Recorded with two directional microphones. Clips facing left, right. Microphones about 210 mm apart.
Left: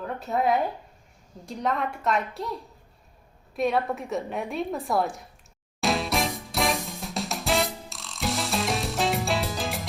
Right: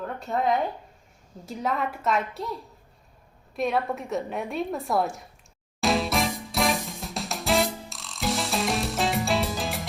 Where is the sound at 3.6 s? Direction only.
Centre (ahead or behind).